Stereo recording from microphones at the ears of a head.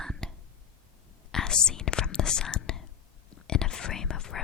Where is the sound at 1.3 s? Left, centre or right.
Left.